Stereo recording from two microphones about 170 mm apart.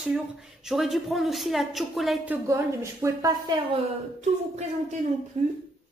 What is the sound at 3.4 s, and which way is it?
Speech, 30° right (ahead or behind).